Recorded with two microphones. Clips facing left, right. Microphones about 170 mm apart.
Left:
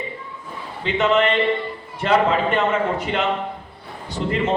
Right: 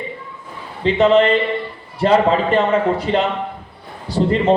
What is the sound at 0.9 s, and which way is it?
A man's voice, 35° right (ahead or behind).